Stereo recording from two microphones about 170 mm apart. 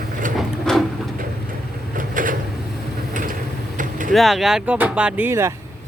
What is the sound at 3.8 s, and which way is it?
Vehicle, 50° right (ahead or behind).